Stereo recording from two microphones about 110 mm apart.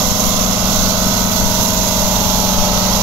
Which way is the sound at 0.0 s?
30° right (ahead or behind).